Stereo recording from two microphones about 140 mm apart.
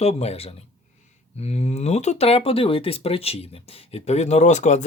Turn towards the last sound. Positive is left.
turn(degrees=55)  # may be behind; listen again after turning